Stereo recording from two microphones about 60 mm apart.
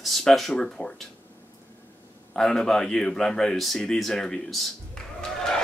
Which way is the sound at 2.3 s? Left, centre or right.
Centre.